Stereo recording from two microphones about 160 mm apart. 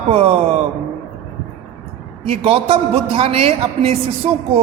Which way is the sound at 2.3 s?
40° right (ahead or behind).